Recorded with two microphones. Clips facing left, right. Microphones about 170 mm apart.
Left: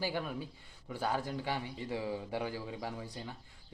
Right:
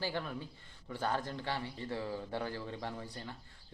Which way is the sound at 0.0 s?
10° left (ahead or behind).